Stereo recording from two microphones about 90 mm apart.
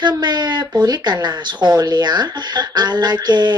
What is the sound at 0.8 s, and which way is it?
A woman's voice, 50° right (ahead or behind).